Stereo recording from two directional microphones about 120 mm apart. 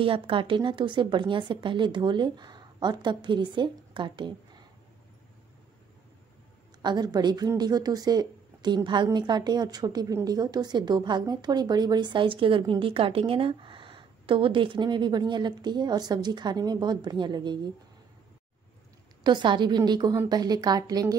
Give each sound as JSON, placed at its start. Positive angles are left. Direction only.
{"t": 0.0, "sound": "a woman's voice", "side_deg": -50}
{"t": 6.8, "sound": "a woman's voice", "side_deg": -35}
{"t": 19.2, "sound": "a woman's voice", "side_deg": -40}